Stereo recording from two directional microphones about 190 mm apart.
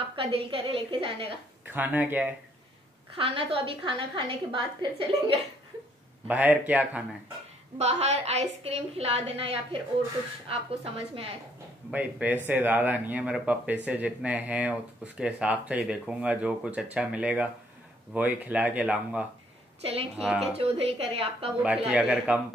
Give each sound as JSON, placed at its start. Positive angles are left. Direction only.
{"t": 0.0, "sound": "a woman's voice", "side_deg": -30}
{"t": 1.7, "sound": "speech", "side_deg": -10}
{"t": 3.2, "sound": "a woman's voice", "side_deg": -30}
{"t": 6.2, "sound": "speech", "side_deg": -10}
{"t": 7.7, "sound": "a woman's voice", "side_deg": -35}
{"t": 11.9, "sound": "speech", "side_deg": -10}
{"t": 19.8, "sound": "a woman's voice", "side_deg": -30}
{"t": 21.6, "sound": "speech", "side_deg": -5}